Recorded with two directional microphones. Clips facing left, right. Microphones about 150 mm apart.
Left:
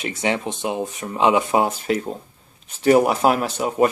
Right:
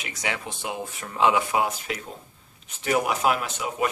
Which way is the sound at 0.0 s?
25° left (ahead or behind).